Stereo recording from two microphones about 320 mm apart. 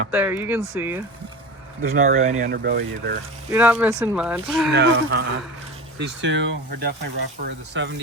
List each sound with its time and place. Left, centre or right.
0.1 s speech: centre
1.8 s speech: right
3.5 s speech: centre
4.7 s speech: right